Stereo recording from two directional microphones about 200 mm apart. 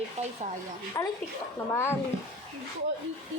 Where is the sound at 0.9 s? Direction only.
20° left (ahead or behind).